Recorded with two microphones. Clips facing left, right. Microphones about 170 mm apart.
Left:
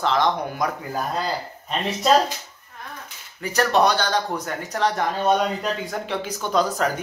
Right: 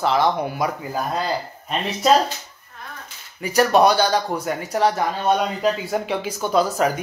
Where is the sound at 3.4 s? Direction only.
10° right (ahead or behind).